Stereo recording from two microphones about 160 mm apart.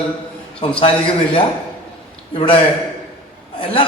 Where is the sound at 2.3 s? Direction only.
35° left (ahead or behind).